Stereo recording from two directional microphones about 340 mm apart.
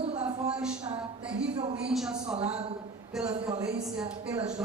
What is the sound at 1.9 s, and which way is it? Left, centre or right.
Speech, centre.